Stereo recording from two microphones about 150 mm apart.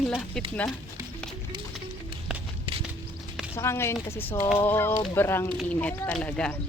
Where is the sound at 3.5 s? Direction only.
15° left (ahead or behind).